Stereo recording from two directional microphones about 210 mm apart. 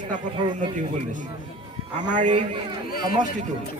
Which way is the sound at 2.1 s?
35° right (ahead or behind).